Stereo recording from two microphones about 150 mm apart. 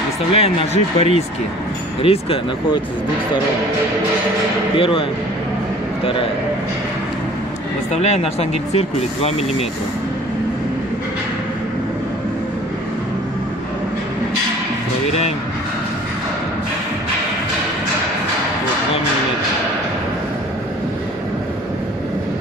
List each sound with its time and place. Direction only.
0.3 s speech: 40° left (ahead or behind)
4.7 s speech: 35° left (ahead or behind)
7.9 s speech: 45° left (ahead or behind)